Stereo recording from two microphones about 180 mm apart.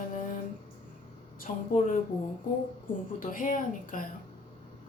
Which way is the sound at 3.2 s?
50° left (ahead or behind).